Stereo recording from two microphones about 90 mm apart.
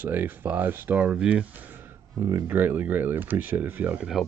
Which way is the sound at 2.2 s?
30° right (ahead or behind).